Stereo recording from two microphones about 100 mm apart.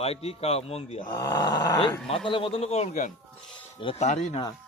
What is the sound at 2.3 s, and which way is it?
Speech, 60° left (ahead or behind).